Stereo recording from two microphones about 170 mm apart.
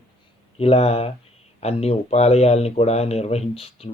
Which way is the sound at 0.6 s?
35° left (ahead or behind).